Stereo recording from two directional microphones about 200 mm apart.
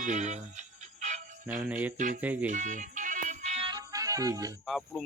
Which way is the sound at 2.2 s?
10° right (ahead or behind).